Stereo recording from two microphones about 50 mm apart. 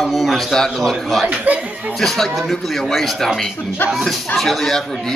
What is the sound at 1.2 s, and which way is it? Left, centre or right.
Speech, right.